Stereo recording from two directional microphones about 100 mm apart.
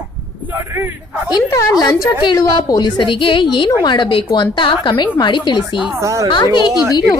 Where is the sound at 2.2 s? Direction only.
45° left (ahead or behind).